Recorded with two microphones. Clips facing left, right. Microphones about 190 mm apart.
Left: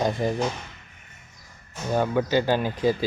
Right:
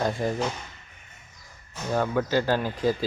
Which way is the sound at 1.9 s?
10° left (ahead or behind).